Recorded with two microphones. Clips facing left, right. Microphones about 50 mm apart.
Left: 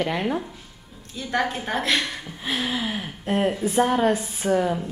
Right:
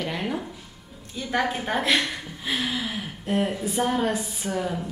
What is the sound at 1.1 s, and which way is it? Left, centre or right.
Speech, centre.